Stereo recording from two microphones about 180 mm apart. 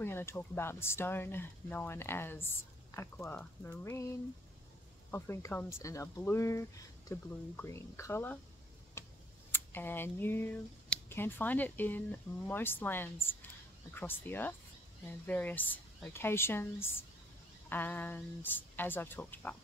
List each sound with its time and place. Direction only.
0.0 s speech: 15° left (ahead or behind)
5.1 s speech: 15° left (ahead or behind)
9.0 s tick-tock: 15° left (ahead or behind)
9.5 s speech: 10° left (ahead or behind)